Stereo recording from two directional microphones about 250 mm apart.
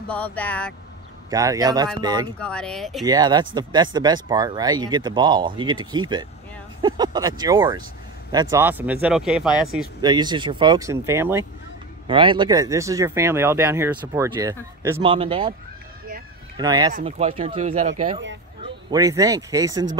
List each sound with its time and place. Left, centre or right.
0.1 s speech: centre
1.3 s speech: centre
2.3 s speech: centre
3.1 s speech: centre
10.0 s speech: centre
16.5 s speech: centre
16.9 s speech: right
18.9 s speech: centre